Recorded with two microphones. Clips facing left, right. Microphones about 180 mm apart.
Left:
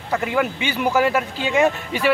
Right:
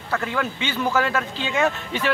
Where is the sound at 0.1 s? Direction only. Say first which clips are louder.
Left 4 dB; 15° left (ahead or behind).